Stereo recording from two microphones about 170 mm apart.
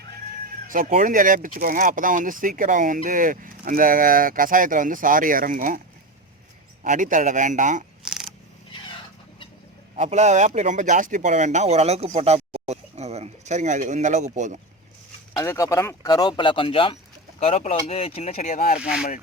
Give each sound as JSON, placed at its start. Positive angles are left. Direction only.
{"t": 0.7, "sound": "speech", "side_deg": -55}
{"t": 6.8, "sound": "speech", "side_deg": -50}
{"t": 8.0, "sound": "a sound", "side_deg": -5}
{"t": 9.9, "sound": "speech", "side_deg": -45}
{"t": 15.4, "sound": "speech", "side_deg": 20}
{"t": 18.8, "sound": "speech", "side_deg": -5}